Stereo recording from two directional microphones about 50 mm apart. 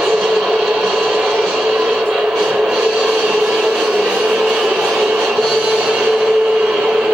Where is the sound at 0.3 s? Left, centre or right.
Centre.